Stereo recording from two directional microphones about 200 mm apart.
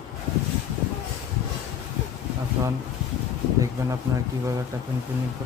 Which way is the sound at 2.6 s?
10° right (ahead or behind).